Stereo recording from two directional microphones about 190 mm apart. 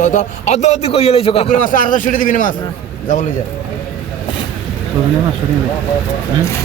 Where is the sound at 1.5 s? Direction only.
45° left (ahead or behind).